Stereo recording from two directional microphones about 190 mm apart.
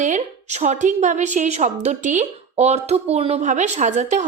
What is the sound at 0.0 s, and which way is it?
A woman's voice, 40° right (ahead or behind).